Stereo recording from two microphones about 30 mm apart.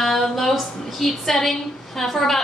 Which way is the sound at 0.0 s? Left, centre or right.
Centre.